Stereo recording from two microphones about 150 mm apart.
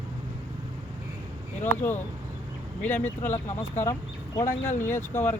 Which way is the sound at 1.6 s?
10° left (ahead or behind).